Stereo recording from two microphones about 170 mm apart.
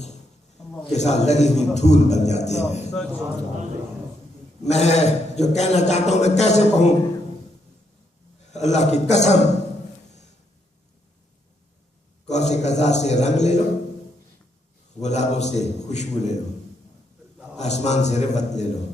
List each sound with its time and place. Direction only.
0.9 s a man's voice: 40° left (ahead or behind)
2.9 s speech: 5° left (ahead or behind)
4.6 s a man's voice: 40° left (ahead or behind)
8.5 s a man's voice: 40° left (ahead or behind)
12.2 s a man's voice: 40° left (ahead or behind)
15.0 s a man's voice: 40° left (ahead or behind)
17.6 s a man's voice: 40° left (ahead or behind)